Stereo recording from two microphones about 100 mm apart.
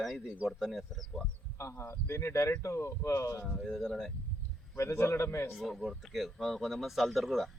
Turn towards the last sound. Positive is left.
turn(degrees=0)  # may be behind; listen again after turning